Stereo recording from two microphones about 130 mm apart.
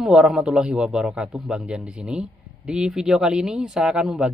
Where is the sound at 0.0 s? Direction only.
5° right (ahead or behind).